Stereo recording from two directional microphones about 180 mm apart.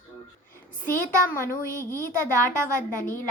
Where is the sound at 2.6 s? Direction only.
50° left (ahead or behind).